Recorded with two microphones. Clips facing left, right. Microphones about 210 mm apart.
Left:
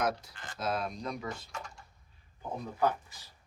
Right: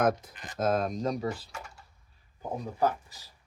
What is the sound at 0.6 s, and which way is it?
Speech, 45° right (ahead or behind).